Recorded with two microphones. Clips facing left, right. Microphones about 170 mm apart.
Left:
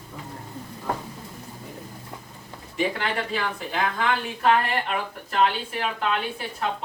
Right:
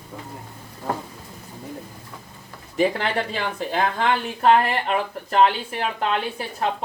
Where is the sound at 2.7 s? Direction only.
35° right (ahead or behind).